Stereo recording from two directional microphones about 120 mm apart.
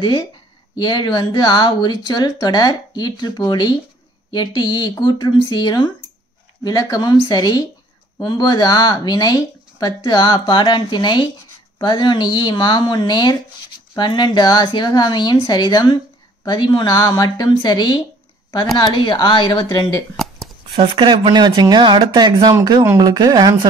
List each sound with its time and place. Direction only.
0.0 s speech: 40° left (ahead or behind)
16.9 s speech: 25° left (ahead or behind)
20.7 s speech: 45° right (ahead or behind)